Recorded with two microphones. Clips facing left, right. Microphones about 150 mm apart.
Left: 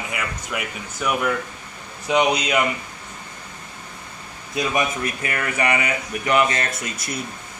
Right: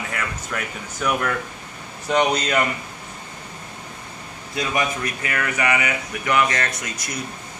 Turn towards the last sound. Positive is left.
turn(degrees=25)  # may be behind; listen again after turning